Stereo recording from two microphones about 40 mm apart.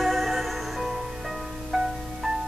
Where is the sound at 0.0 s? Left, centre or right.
Centre.